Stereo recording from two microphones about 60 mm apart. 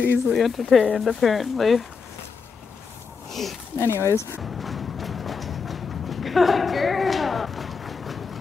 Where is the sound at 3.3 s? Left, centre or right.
Centre.